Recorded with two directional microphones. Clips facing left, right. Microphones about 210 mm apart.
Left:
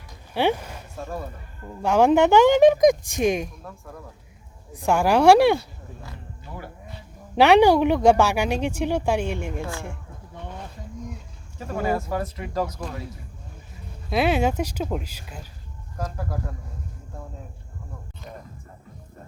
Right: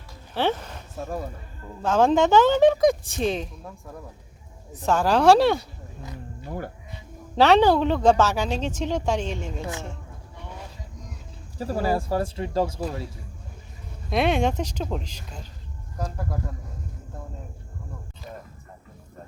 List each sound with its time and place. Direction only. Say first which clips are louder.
0.3 s speech: left 2 dB; 10° left (ahead or behind)
1.8 s a woman's voice: left 2 dB; 10° left (ahead or behind)
4.7 s a woman's voice: left 1 dB; 10° left (ahead or behind)
7.3 s a woman's voice: left 2 dB; 10° left (ahead or behind)
9.6 s a woman's voice: left 1 dB; 20° right (ahead or behind)
11.5 s speech: right 1 dB; 35° right (ahead or behind)
14.1 s a woman's voice: left 1 dB; 5° left (ahead or behind)